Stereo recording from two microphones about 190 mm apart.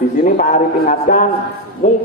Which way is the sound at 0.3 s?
40° left (ahead or behind).